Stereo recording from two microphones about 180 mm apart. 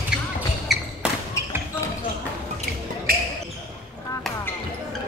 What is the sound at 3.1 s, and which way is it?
Basketball bounce, 55° right (ahead or behind).